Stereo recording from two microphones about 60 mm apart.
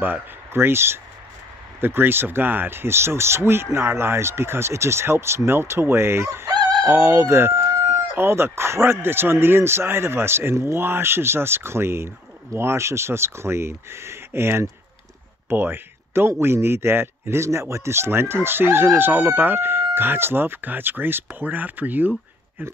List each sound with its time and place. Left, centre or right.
0.0 s speech: right